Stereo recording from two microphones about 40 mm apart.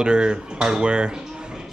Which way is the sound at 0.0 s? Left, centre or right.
Right.